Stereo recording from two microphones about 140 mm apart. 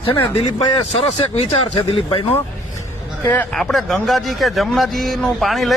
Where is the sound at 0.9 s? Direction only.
45° left (ahead or behind).